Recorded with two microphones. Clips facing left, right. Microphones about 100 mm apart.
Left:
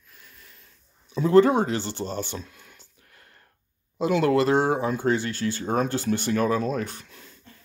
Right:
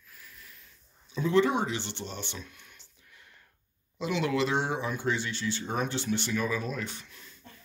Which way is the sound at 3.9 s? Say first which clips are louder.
Left 8 dB; 45° left (ahead or behind).